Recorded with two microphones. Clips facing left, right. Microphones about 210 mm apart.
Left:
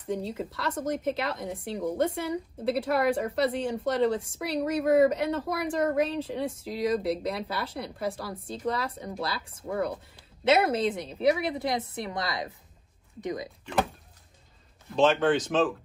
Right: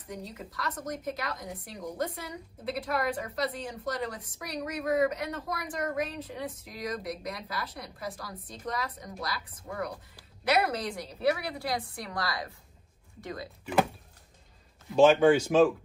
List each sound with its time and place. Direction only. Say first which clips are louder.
0.0 s a woman's voice: left 9 dB; 25° left (ahead or behind)
14.9 s speech: right 3 dB; 10° right (ahead or behind)